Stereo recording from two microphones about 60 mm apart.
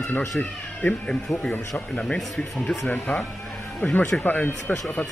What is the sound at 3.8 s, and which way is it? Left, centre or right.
Speech, left.